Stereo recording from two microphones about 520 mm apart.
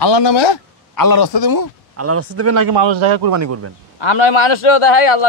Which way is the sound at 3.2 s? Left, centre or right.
Right.